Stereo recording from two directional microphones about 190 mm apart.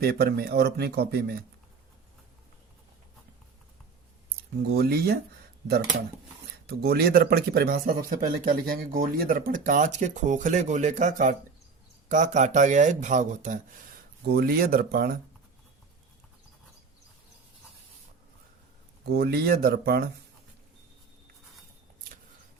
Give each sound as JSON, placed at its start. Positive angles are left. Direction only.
{"t": 0.0, "sound": "speech", "side_deg": -55}
{"t": 4.8, "sound": "speech", "side_deg": -55}
{"t": 6.7, "sound": "speech", "side_deg": -55}
{"t": 14.3, "sound": "speech", "side_deg": -55}
{"t": 19.1, "sound": "speech", "side_deg": -55}